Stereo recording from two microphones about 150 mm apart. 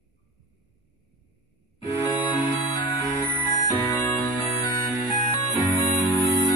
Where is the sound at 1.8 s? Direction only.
30° left (ahead or behind).